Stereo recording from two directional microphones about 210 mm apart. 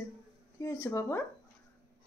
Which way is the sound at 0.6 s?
15° left (ahead or behind).